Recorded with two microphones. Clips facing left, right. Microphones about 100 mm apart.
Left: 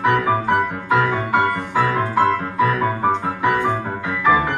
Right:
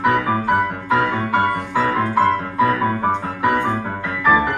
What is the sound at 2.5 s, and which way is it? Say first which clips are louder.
Music: right 1 dB; 30° right (ahead or behind).